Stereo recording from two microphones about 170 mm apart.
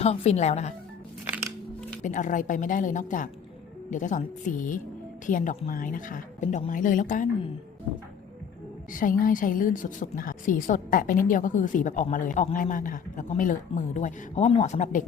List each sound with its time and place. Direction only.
0.0 s speech: 40° left (ahead or behind)
2.0 s a woman's voice: 50° left (ahead or behind)
8.9 s a woman's voice: 50° left (ahead or behind)